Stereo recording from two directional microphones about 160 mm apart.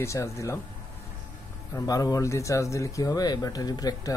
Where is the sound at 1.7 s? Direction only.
25° left (ahead or behind).